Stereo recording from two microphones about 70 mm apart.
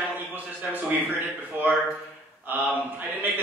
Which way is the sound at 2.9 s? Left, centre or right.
Right.